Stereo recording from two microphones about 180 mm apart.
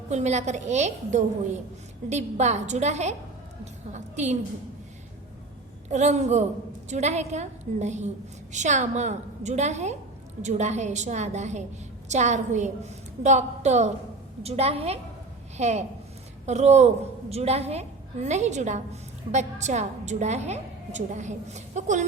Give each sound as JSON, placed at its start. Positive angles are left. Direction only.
{"t": 0.1, "sound": "a woman's voice", "side_deg": -40}
{"t": 5.9, "sound": "a woman's voice", "side_deg": -40}